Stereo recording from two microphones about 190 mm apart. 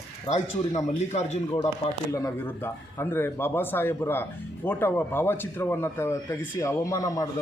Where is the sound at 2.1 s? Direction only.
15° left (ahead or behind).